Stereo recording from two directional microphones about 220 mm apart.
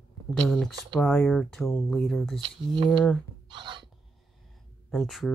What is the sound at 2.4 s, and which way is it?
Speech, 20° right (ahead or behind).